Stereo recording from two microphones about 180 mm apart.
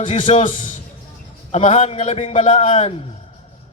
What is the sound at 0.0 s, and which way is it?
A man's voice, 40° left (ahead or behind).